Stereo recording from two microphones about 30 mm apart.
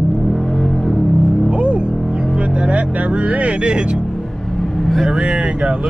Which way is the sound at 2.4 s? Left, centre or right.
Right.